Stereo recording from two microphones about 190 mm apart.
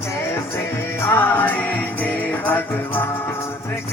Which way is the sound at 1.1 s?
10° left (ahead or behind).